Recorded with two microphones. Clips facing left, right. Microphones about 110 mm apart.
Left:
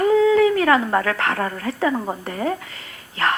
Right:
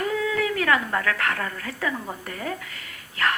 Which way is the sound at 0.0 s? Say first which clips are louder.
Left 10 dB; 30° left (ahead or behind).